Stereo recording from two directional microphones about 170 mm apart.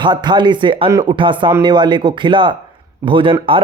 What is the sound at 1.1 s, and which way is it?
A man's voice, 30° right (ahead or behind).